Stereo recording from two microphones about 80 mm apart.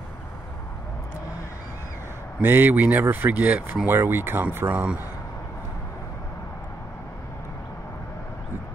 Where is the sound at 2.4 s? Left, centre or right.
Right.